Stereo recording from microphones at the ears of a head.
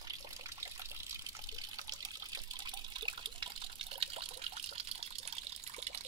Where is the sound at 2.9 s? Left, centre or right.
Right.